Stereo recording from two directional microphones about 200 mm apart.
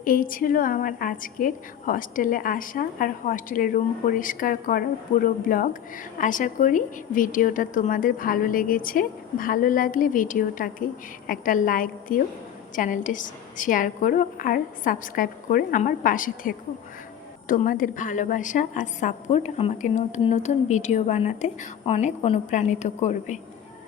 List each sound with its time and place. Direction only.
0.0 s a woman's voice: 45° left (ahead or behind)